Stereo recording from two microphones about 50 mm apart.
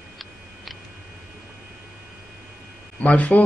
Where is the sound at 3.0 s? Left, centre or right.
Left.